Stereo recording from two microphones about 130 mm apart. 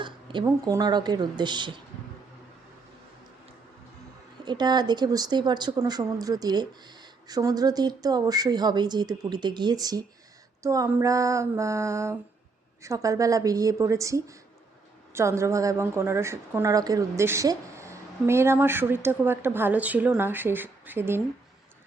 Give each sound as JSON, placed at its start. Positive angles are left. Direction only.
{"t": 0.0, "sound": "a sound", "side_deg": -40}
{"t": 0.4, "sound": "speech", "side_deg": -30}
{"t": 4.4, "sound": "a woman's voice", "side_deg": -30}